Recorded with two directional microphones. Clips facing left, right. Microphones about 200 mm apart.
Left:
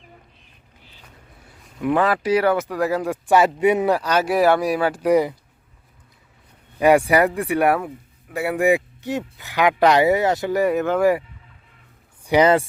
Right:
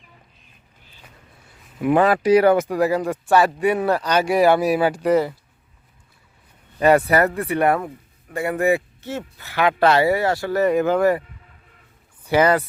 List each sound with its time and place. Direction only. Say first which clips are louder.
1.8 s speech: right 3 dB; 15° right (ahead or behind)
2.9 s speech: right 1 dB; centre (ahead or behind)
3.2 s speech: left 2 dB; 20° left (ahead or behind); by 4.9 s 5° right (ahead or behind)
5.0 s speech: left 2 dB; 15° left (ahead or behind)
6.7 s speech: left 1 dB; 10° left (ahead or behind)
10.7 s speech: right 2 dB; centre (ahead or behind)
12.3 s speech: left 1 dB; 20° left (ahead or behind)